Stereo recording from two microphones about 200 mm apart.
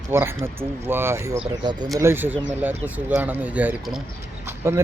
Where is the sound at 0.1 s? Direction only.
10° right (ahead or behind).